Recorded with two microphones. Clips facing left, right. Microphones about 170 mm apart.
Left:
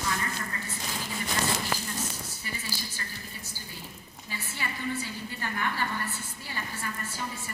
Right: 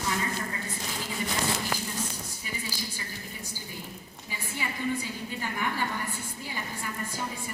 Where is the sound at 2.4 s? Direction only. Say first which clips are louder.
Right 2 dB; 15° right (ahead or behind).